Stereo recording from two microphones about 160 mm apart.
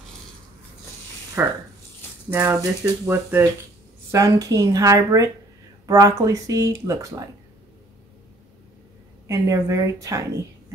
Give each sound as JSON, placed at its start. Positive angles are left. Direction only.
{"t": 1.4, "sound": "speech", "side_deg": -15}
{"t": 9.3, "sound": "speech", "side_deg": -20}